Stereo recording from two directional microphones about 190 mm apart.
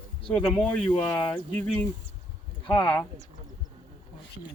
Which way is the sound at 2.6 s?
5° left (ahead or behind).